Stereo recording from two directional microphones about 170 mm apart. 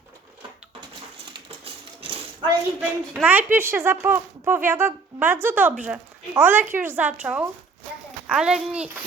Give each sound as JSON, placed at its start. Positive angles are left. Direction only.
{"t": 1.5, "sound": "typewriter", "side_deg": -35}
{"t": 3.1, "sound": "a child's voice", "side_deg": -10}